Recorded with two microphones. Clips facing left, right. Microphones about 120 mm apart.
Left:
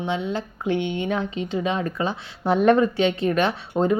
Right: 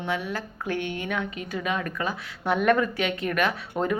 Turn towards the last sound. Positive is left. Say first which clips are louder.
# left 4 dB
turn(degrees=30)  # may be behind; listen again after turning